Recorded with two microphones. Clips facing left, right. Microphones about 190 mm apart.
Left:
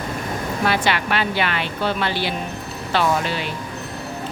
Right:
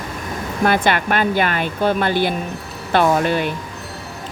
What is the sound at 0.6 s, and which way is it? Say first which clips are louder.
Speech: right 5 dB; 50° right (ahead or behind).